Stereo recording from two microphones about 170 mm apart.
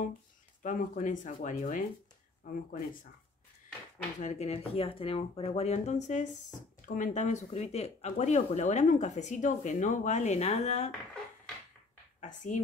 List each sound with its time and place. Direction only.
0.6 s speech: 50° left (ahead or behind)
4.2 s speech: 40° left (ahead or behind)
12.2 s speech: 45° left (ahead or behind)